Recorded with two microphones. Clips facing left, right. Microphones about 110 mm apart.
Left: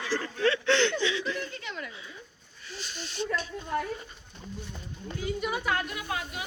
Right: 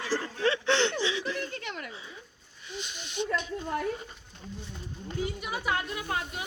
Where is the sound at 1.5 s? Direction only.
55° right (ahead or behind).